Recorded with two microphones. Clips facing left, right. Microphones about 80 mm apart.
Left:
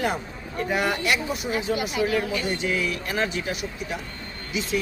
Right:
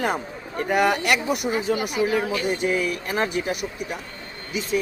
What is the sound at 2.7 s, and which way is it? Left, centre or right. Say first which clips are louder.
Speech: right 3 dB; right.